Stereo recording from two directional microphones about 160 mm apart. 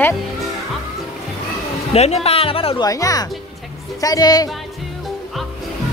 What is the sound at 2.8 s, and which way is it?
Speech, 20° left (ahead or behind).